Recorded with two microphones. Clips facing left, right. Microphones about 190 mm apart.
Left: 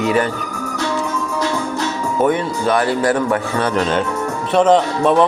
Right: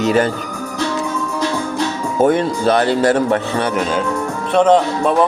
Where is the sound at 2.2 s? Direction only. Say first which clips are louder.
Right 3 dB; 30° right (ahead or behind).